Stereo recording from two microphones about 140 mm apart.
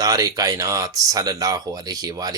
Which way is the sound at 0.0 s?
25° right (ahead or behind).